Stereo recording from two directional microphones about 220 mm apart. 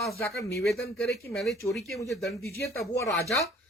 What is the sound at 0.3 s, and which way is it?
Speech, centre (ahead or behind).